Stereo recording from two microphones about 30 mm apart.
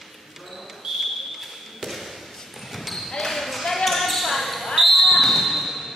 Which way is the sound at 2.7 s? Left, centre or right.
Centre.